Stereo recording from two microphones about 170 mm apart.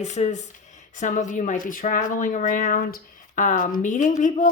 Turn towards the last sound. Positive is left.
turn(degrees=50)  # may be behind; listen again after turning